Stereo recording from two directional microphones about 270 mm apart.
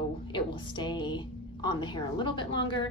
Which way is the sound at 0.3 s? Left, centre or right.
Centre.